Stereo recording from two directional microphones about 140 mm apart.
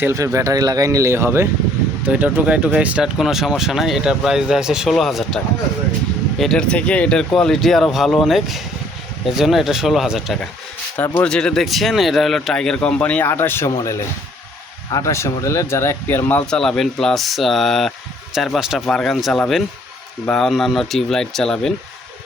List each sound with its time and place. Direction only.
0.0 s speech: 20° right (ahead or behind); by 5.4 s centre (ahead or behind)
6.4 s speech: 5° left (ahead or behind)
10.9 s speech: 15° left (ahead or behind)
16.5 s speech: 5° left (ahead or behind)